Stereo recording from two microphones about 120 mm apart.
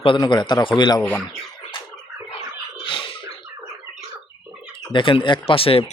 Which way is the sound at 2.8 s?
45° left (ahead or behind).